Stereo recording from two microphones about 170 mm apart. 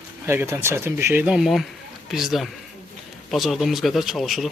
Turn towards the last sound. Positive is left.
turn(degrees=0)  # may be behind; listen again after turning